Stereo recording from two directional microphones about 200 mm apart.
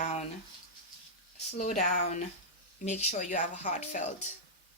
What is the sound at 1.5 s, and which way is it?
Speech, 35° left (ahead or behind).